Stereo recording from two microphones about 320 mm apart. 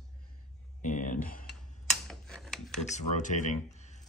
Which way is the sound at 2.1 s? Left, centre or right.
Centre.